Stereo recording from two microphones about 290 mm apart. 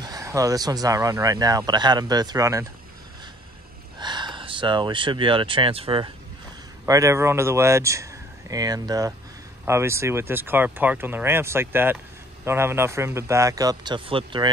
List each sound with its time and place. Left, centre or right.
0.0 s speech: centre
4.0 s speech: centre